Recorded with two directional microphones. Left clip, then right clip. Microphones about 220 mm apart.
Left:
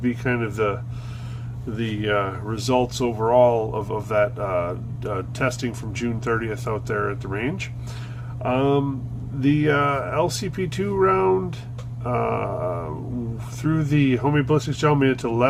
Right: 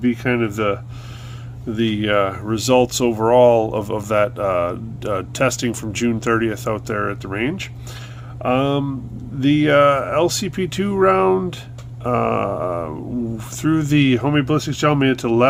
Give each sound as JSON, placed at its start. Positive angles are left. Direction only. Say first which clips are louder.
{"t": 0.0, "sound": "speech", "louder": "right 5 dB", "side_deg": -45}